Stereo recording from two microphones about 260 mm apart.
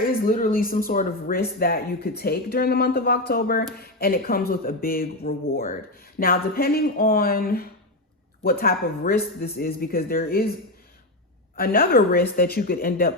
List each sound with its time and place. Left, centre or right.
0.0 s speech: left
11.5 s speech: left